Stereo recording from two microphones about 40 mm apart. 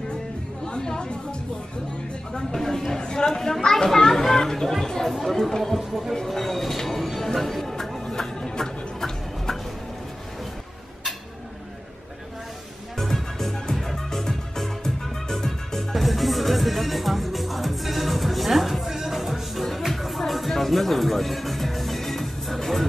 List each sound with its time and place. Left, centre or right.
0.7 s chatter: centre
2.3 s a child's voice: centre
3.3 s a child's voice: centre
6.2 s music: centre
12.9 s music: centre
15.9 s music: centre